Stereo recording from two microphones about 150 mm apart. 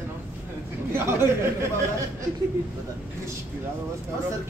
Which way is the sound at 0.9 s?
15° right (ahead or behind).